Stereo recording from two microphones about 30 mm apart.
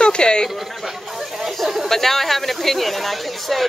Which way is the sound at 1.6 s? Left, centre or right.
Centre.